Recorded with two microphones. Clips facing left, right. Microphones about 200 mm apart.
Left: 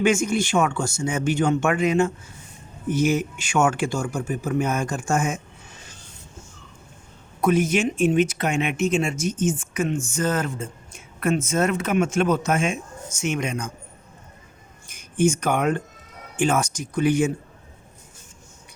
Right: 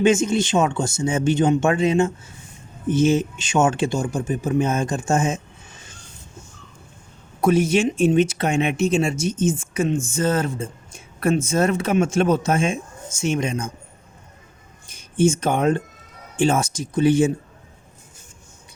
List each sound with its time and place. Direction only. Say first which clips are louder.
0.0 s speech: right 3 dB; 25° right (ahead or behind)
7.4 s speech: right 2 dB; 30° right (ahead or behind)
14.8 s speech: right 2 dB; 25° right (ahead or behind)